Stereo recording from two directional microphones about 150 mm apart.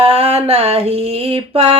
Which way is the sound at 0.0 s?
40° right (ahead or behind).